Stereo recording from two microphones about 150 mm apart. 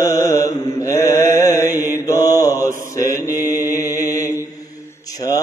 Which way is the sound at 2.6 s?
20° left (ahead or behind).